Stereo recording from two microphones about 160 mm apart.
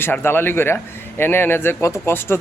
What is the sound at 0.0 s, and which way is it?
A man's voice, 15° left (ahead or behind).